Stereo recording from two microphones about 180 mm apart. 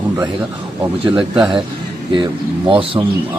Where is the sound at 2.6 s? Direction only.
30° right (ahead or behind).